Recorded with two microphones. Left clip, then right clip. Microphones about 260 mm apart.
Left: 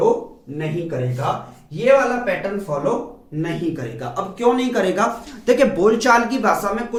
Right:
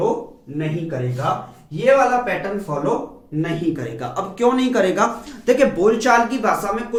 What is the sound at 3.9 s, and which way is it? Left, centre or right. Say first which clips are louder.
Speech: right 2 dB; right.